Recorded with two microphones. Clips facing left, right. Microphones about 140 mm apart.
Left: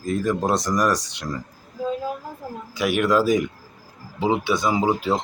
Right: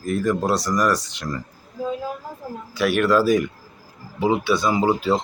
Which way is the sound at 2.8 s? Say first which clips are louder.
Right 1 dB; 15° left (ahead or behind).